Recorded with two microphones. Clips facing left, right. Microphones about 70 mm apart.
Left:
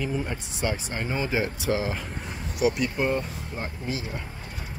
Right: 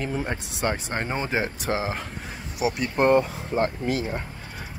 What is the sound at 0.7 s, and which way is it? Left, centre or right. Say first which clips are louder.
Speech: right 2 dB; right.